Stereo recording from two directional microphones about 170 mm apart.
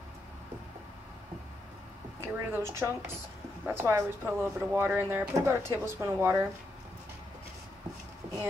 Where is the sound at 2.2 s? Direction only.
15° right (ahead or behind).